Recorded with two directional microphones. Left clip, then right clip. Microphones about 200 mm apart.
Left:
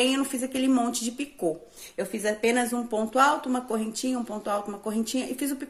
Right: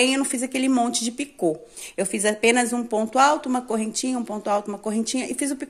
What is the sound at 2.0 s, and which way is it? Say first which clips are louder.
Speech: right 5 dB; 40° right (ahead or behind).